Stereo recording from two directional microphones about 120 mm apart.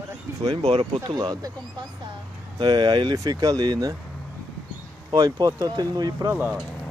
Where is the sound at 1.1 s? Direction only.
35° right (ahead or behind).